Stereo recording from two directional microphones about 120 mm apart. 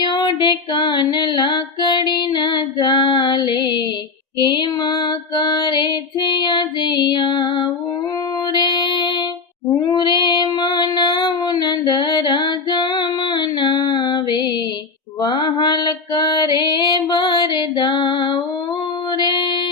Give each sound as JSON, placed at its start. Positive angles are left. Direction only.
{"t": 0.0, "sound": "female singing", "side_deg": 35}
{"t": 4.4, "sound": "music", "side_deg": 40}
{"t": 9.6, "sound": "child singing", "side_deg": 25}
{"t": 10.0, "sound": "child singing", "side_deg": 40}
{"t": 15.2, "sound": "mantra", "side_deg": 35}
{"t": 19.1, "sound": "female singing", "side_deg": 40}